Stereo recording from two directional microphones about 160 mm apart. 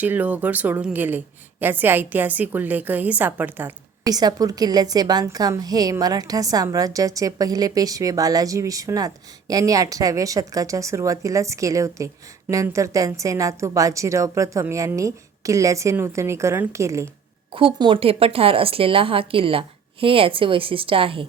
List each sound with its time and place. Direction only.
0.0 s a woman's voice: 10° right (ahead or behind)
4.0 s a woman's voice: 25° right (ahead or behind)
17.5 s speech: 35° right (ahead or behind)